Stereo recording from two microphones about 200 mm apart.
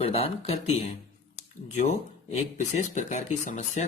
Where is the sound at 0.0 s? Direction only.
30° left (ahead or behind).